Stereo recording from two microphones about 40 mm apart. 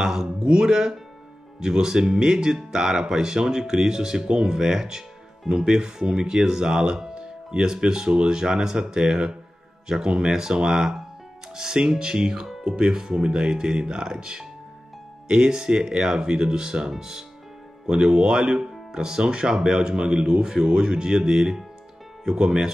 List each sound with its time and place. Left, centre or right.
0.0 s speech: centre